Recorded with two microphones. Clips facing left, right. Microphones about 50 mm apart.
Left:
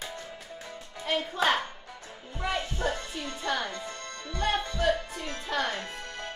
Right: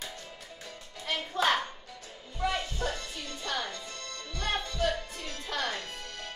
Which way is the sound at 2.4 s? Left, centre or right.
Left.